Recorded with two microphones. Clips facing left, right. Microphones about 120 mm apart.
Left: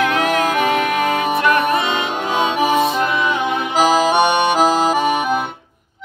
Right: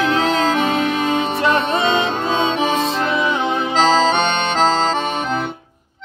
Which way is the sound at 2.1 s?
15° left (ahead or behind).